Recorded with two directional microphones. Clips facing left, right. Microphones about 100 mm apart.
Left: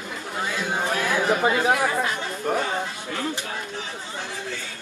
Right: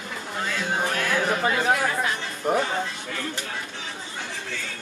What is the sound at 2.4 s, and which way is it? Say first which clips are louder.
Speech: right 2 dB; 5° right (ahead or behind).